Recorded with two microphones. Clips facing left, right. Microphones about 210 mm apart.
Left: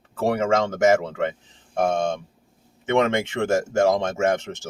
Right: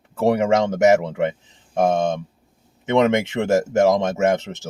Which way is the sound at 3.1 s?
20° right (ahead or behind).